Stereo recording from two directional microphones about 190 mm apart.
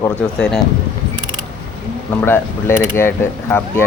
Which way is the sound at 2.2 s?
10° left (ahead or behind).